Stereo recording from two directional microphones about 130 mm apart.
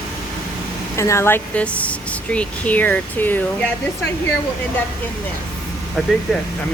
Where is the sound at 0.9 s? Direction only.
20° left (ahead or behind).